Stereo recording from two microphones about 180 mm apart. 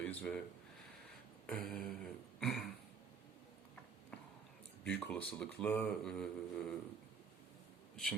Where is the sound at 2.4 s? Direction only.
Centre (ahead or behind).